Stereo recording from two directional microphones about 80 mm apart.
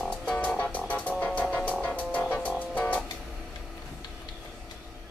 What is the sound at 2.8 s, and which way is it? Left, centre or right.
Vehicle, centre.